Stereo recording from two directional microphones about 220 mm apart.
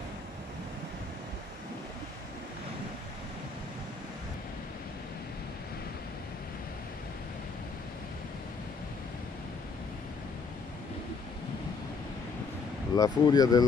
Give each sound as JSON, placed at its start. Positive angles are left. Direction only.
{"t": 12.9, "sound": "speech", "side_deg": 15}